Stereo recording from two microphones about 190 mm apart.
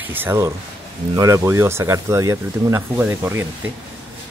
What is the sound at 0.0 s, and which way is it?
Speech, 10° right (ahead or behind).